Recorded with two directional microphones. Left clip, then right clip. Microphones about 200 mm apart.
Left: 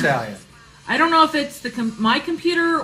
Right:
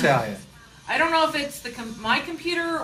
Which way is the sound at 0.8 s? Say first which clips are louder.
Left 5 dB; 55° right (ahead or behind).